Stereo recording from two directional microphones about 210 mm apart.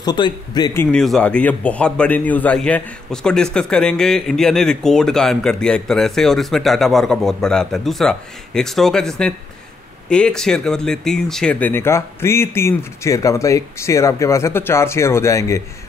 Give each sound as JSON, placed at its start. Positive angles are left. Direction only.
{"t": 0.0, "sound": "speech", "side_deg": 20}
{"t": 0.9, "sound": "a man's voice", "side_deg": 5}